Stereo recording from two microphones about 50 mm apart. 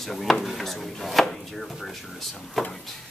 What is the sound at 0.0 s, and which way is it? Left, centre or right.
Speech, centre.